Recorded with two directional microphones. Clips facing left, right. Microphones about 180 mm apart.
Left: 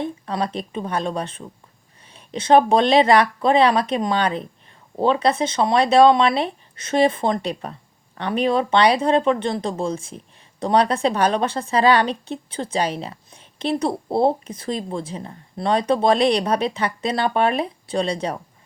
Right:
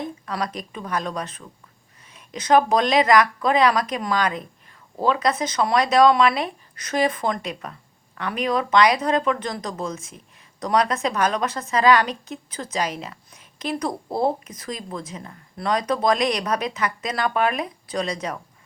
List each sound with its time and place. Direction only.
0.0 s a woman's voice: 30° left (ahead or behind)